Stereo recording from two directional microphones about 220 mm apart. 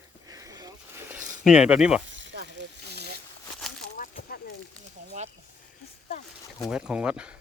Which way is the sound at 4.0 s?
40° left (ahead or behind).